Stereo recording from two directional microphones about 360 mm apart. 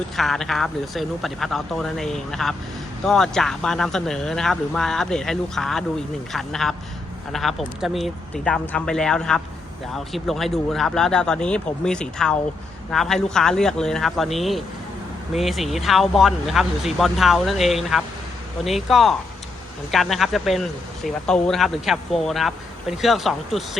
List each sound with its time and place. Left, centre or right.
0.2 s speech: centre